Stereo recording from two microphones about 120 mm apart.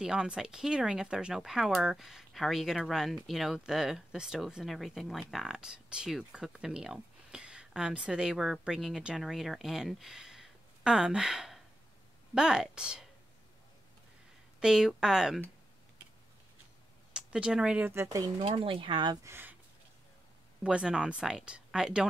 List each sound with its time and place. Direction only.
0.0 s speech: 5° right (ahead or behind)
14.6 s speech: 5° right (ahead or behind)
17.1 s speech: 5° right (ahead or behind)
17.9 s speech: 25° right (ahead or behind)
18.4 s speech: 45° right (ahead or behind)
19.2 s speech: 20° right (ahead or behind)
20.6 s speech: 5° right (ahead or behind)